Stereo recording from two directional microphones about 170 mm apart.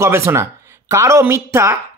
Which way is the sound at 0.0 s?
15° right (ahead or behind).